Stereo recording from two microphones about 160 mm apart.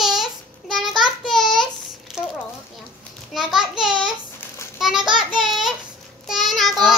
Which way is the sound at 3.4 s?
Centre (ahead or behind).